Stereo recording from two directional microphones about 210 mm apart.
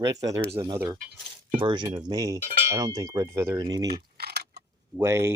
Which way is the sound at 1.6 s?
20° right (ahead or behind).